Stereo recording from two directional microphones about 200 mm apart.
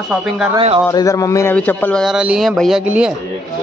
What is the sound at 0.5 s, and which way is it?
Speech, 30° right (ahead or behind).